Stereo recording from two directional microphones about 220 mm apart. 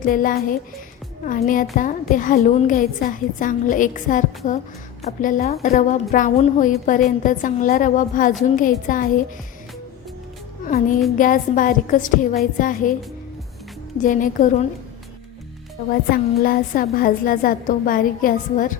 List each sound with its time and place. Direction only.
0.0 s a woman's voice: 40° left (ahead or behind)
11.2 s a woman's voice: 35° left (ahead or behind)
14.0 s a woman's voice: 35° left (ahead or behind)
15.9 s a woman's voice: 40° left (ahead or behind)